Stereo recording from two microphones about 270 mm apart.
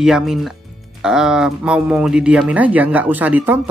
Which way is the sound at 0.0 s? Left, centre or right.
Centre.